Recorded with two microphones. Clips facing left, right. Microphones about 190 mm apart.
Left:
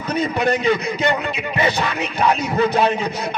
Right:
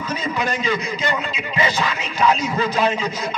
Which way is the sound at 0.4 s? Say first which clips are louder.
Left 5 dB; 60° left (ahead or behind).